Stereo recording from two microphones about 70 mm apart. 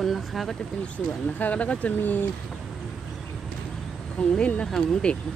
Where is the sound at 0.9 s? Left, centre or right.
Left.